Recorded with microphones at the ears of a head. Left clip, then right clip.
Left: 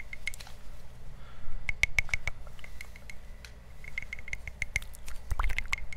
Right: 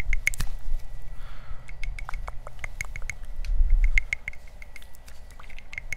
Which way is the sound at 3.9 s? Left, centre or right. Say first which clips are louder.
Right 12 dB; right.